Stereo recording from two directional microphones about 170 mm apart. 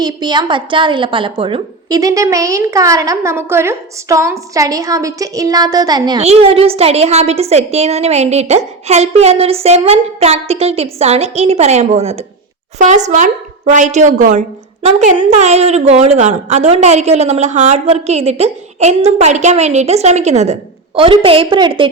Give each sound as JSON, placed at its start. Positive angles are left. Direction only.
{"t": 0.0, "sound": "a woman's voice", "side_deg": -25}
{"t": 6.1, "sound": "a woman's voice", "side_deg": -35}